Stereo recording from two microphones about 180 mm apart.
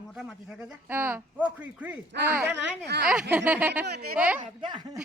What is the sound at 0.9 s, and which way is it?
Speech, 10° right (ahead or behind).